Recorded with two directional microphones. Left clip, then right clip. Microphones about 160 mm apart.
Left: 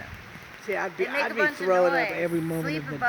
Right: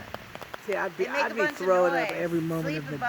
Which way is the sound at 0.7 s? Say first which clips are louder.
Left 1 dB; 55° right (ahead or behind).